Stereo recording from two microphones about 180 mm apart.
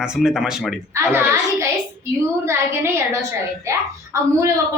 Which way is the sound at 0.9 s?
15° right (ahead or behind).